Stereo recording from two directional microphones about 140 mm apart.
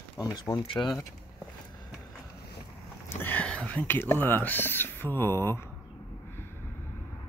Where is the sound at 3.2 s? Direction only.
10° left (ahead or behind).